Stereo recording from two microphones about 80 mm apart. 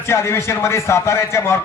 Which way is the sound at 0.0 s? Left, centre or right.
Left.